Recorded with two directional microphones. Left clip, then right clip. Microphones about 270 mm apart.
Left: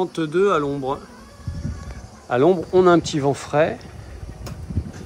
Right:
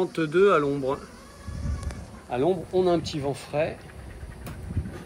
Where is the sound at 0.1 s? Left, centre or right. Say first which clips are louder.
Right 1 dB; centre.